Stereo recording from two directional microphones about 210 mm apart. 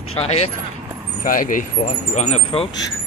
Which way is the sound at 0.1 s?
30° left (ahead or behind).